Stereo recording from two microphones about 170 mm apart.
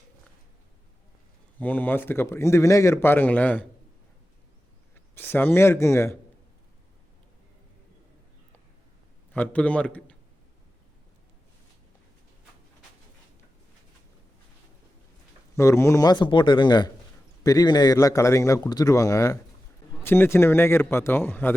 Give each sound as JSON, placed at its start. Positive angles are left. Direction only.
{"t": 1.5, "sound": "speech", "side_deg": 10}
{"t": 5.1, "sound": "speech", "side_deg": 15}
{"t": 9.3, "sound": "speech", "side_deg": 10}
{"t": 15.5, "sound": "a man's voice", "side_deg": 15}